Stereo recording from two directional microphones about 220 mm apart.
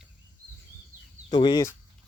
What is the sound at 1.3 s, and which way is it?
Speech, 20° left (ahead or behind).